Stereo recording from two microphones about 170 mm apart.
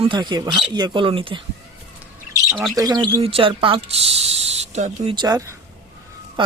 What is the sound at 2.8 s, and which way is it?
Speech, 20° right (ahead or behind).